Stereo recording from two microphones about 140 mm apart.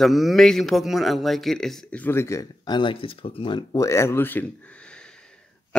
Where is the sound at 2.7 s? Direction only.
35° left (ahead or behind).